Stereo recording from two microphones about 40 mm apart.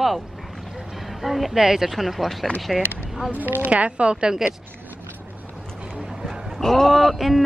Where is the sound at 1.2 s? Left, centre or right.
Centre.